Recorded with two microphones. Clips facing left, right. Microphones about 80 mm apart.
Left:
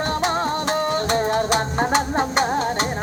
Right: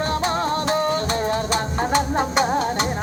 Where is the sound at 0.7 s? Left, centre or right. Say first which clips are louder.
Even; left.